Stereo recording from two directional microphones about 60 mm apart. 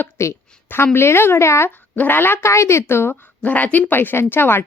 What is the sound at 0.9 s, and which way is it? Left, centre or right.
Speech, left.